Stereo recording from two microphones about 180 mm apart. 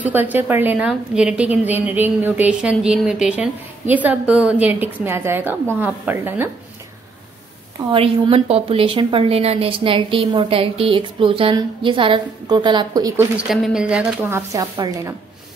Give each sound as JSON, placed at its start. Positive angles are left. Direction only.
{"t": 0.0, "sound": "a woman's voice", "side_deg": -10}
{"t": 7.9, "sound": "a woman's voice", "side_deg": -30}
{"t": 13.4, "sound": "a woman's voice", "side_deg": -5}